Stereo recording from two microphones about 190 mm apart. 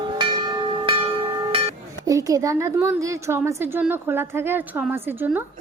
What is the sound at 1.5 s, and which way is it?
Music, 30° right (ahead or behind).